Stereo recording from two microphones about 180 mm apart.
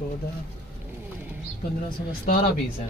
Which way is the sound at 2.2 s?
40° left (ahead or behind).